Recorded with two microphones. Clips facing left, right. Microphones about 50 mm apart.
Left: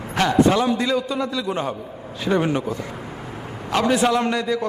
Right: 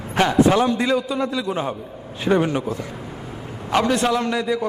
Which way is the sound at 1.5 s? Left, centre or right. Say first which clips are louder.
Even; centre.